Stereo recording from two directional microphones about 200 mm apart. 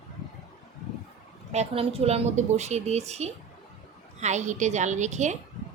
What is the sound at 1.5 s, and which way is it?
A woman's voice, 30° right (ahead or behind).